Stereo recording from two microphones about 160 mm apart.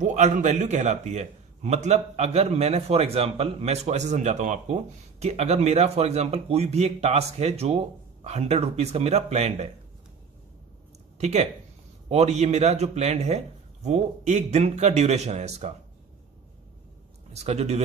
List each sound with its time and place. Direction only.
0.0 s a man's voice: 50° right (ahead or behind)
11.1 s a man's voice: 45° right (ahead or behind)
17.3 s a man's voice: 40° right (ahead or behind)